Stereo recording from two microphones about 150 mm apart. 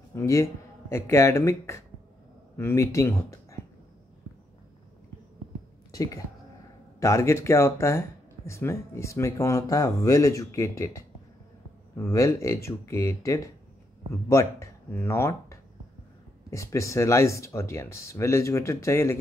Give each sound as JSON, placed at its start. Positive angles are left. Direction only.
{"t": 0.1, "sound": "speech", "side_deg": 20}
{"t": 5.9, "sound": "a sound", "side_deg": 25}
{"t": 7.0, "sound": "speech", "side_deg": 20}